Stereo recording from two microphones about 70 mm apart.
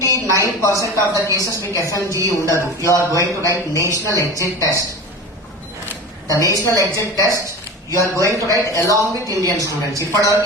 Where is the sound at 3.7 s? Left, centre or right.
Right.